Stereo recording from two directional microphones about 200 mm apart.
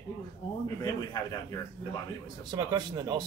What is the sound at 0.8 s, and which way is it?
Speech, 20° left (ahead or behind).